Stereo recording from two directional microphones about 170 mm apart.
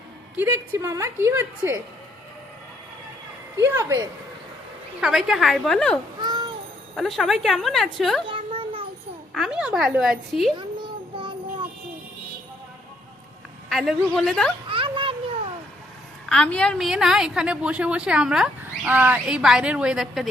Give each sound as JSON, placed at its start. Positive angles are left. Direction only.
{"t": 0.3, "sound": "a woman's voice", "side_deg": -15}
{"t": 3.6, "sound": "a woman's voice", "side_deg": -15}
{"t": 4.9, "sound": "a woman's voice", "side_deg": -5}
{"t": 6.1, "sound": "a sound", "side_deg": -25}
{"t": 6.9, "sound": "a woman's voice", "side_deg": 0}
{"t": 8.3, "sound": "a sound", "side_deg": -30}
{"t": 9.3, "sound": "a woman's voice", "side_deg": -5}
{"t": 10.6, "sound": "child singing", "side_deg": -30}
{"t": 13.7, "sound": "a woman's voice", "side_deg": 0}
{"t": 14.7, "sound": "a sound", "side_deg": -30}
{"t": 16.3, "sound": "a woman's voice", "side_deg": 5}